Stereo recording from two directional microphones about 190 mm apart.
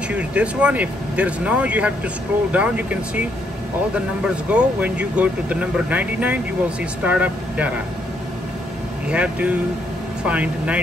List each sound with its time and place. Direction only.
0.1 s speech: 5° right (ahead or behind)
9.1 s speech: 5° right (ahead or behind)